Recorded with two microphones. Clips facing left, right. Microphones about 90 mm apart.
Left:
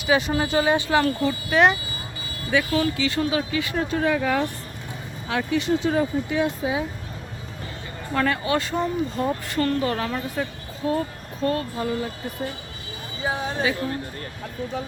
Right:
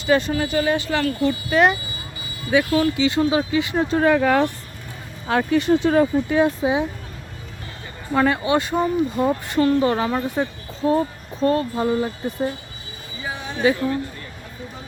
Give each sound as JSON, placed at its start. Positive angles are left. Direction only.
{"t": 0.0, "sound": "speech", "side_deg": 5}
{"t": 0.3, "sound": "speech", "side_deg": 20}
{"t": 1.2, "sound": "speech", "side_deg": 0}
{"t": 2.5, "sound": "speech", "side_deg": -15}
{"t": 4.0, "sound": "speech", "side_deg": -60}
{"t": 5.3, "sound": "speech", "side_deg": -50}
{"t": 6.4, "sound": "speech", "side_deg": -25}
{"t": 8.1, "sound": "speech", "side_deg": -20}
{"t": 13.2, "sound": "a sound", "side_deg": 25}